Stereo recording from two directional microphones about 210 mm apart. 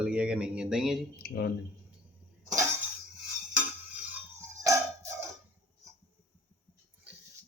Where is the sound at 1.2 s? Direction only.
50° left (ahead or behind).